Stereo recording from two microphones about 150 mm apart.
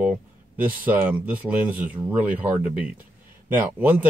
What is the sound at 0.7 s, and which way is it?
A man's voice, 10° right (ahead or behind).